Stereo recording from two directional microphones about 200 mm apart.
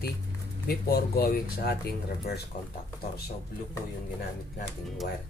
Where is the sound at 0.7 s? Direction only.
50° left (ahead or behind).